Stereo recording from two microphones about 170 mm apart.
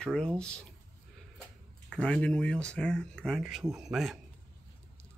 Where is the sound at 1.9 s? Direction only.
5° left (ahead or behind).